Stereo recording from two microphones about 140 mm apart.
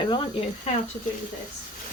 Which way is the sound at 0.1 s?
40° left (ahead or behind).